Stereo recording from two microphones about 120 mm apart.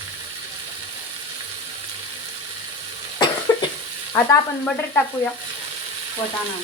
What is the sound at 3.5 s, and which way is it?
Cough, 35° left (ahead or behind).